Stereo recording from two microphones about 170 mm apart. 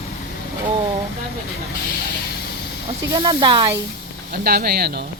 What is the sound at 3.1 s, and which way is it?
Speech, 25° right (ahead or behind).